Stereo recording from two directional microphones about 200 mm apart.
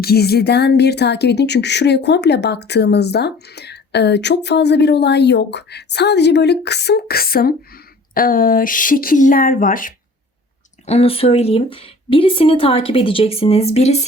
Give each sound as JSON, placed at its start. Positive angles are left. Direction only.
{"t": 0.0, "sound": "speech", "side_deg": 50}
{"t": 10.8, "sound": "speech", "side_deg": 30}